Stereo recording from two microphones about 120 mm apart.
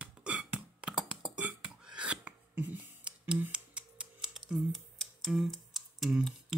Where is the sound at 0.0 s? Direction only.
10° right (ahead or behind).